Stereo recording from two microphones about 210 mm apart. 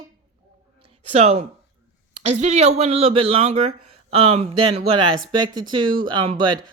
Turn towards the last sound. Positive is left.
turn(degrees=-20)  # may be behind; listen again after turning